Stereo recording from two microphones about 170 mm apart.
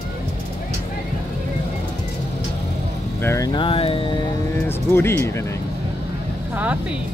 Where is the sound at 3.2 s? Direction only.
15° left (ahead or behind); by 4.1 s 30° left (ahead or behind).